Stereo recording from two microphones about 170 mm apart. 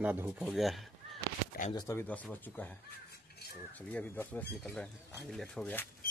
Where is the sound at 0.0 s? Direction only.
10° right (ahead or behind).